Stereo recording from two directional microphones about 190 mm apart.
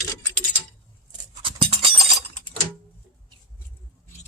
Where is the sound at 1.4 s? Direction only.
25° right (ahead or behind).